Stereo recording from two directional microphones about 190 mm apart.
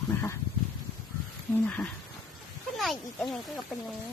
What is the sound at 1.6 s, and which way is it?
Speech, 5° left (ahead or behind).